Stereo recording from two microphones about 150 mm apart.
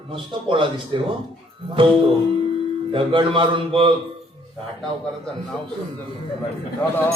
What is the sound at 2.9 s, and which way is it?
Music, 35° right (ahead or behind).